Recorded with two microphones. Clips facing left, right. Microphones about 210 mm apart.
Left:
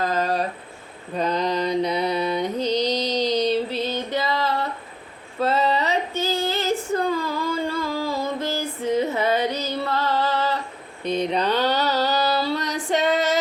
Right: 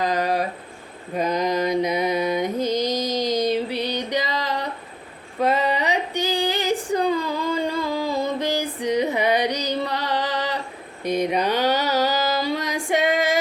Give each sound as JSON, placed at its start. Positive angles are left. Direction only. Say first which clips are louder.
{"t": 0.0, "sound": "a sound", "louder": "right 1 dB", "side_deg": -15}
{"t": 1.1, "sound": "mantra", "louder": "right 1 dB", "side_deg": -10}
{"t": 5.4, "sound": "female singing", "louder": "even", "side_deg": -15}